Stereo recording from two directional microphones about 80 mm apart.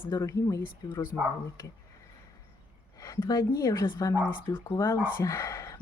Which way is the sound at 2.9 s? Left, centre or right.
Left.